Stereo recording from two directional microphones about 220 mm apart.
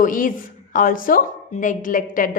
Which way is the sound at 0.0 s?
40° left (ahead or behind).